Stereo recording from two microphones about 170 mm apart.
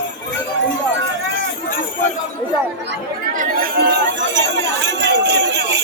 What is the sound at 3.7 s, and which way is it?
Jingle bell, 80° right.